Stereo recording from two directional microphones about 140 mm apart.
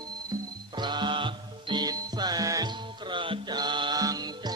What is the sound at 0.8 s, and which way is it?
Music, 35° right (ahead or behind).